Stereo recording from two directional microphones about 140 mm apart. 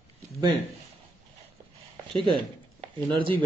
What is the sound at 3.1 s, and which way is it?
Speech, 35° right (ahead or behind).